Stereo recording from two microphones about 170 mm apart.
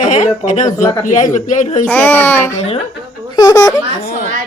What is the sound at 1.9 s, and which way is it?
A child's voice, 10° left (ahead or behind).